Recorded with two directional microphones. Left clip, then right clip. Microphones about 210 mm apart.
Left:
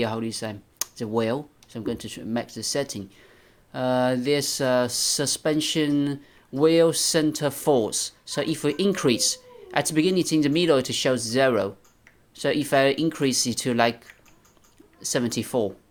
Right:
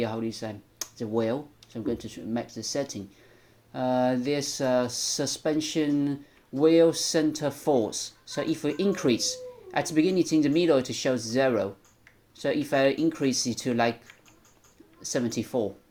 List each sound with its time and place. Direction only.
0.0 s speech: 40° left (ahead or behind)